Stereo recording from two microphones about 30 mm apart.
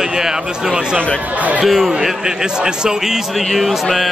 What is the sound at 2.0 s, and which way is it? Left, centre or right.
Speech, right.